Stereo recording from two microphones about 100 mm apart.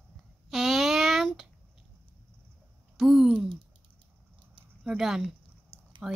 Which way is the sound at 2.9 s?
5° right (ahead or behind).